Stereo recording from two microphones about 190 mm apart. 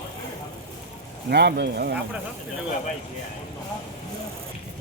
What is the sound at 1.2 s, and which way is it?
Speech, 60° right (ahead or behind).